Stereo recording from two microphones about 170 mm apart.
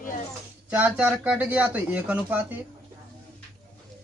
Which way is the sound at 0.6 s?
10° right (ahead or behind).